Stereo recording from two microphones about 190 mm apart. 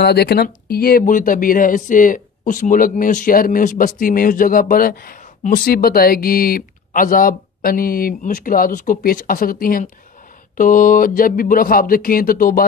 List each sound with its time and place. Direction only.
0.0 s speech: 55° left (ahead or behind)